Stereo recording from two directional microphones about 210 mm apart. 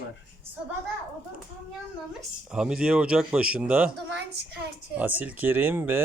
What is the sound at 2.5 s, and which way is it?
Speech, 5° right (ahead or behind).